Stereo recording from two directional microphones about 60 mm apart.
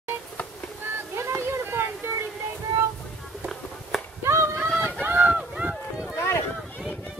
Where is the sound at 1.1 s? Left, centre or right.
Right.